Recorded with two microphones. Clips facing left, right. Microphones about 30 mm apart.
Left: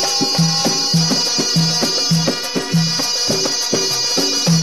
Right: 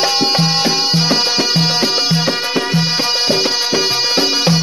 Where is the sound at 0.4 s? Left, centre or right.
Right.